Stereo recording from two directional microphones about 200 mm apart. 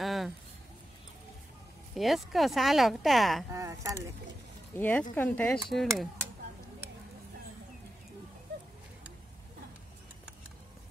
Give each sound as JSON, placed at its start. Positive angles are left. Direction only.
{"t": 0.0, "sound": "a sound", "side_deg": 0}
{"t": 2.0, "sound": "speech", "side_deg": 0}
{"t": 3.5, "sound": "speech", "side_deg": -15}
{"t": 4.7, "sound": "speech", "side_deg": 10}